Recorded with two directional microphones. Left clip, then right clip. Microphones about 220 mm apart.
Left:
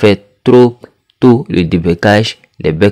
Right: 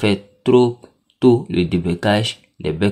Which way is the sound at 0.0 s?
50° left (ahead or behind).